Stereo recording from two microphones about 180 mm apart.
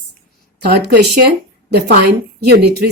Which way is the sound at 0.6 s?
65° right (ahead or behind).